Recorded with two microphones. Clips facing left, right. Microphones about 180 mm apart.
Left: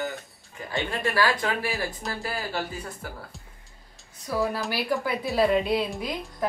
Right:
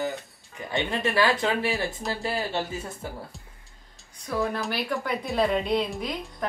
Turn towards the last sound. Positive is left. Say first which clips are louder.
# even
turn(degrees=0)  # may be behind; listen again after turning